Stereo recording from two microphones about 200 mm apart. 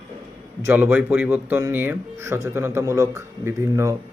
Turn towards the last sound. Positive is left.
turn(degrees=-15)  # may be behind; listen again after turning